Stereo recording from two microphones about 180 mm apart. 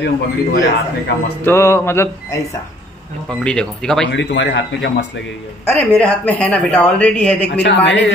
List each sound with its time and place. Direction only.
0.0 s a man's voice: 65° left (ahead or behind)
1.4 s a woman's voice: 15° left (ahead or behind)
3.3 s speech: 5° left (ahead or behind)
4.1 s speech: 75° left (ahead or behind)
5.7 s a woman's voice: 10° left (ahead or behind)
7.4 s a man's voice: 75° left (ahead or behind)